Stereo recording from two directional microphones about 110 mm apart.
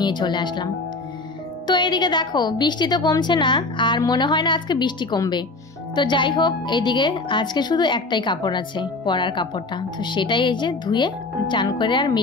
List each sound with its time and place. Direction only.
0.0 s a woman's voice: 45° left (ahead or behind)
1.7 s a woman's voice: 40° left (ahead or behind)